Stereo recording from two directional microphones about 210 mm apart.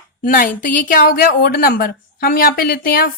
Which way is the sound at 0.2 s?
40° left (ahead or behind).